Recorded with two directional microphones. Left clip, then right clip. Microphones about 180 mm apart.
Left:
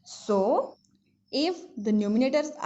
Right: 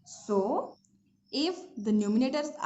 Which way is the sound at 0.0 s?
30° left (ahead or behind).